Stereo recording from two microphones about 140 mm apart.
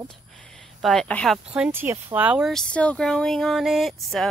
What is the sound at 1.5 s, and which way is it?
Speech, 10° right (ahead or behind).